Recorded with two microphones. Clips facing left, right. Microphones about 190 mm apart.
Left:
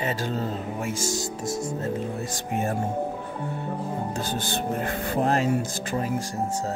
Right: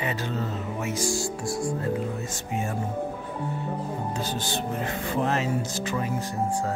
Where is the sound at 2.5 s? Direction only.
55° left (ahead or behind).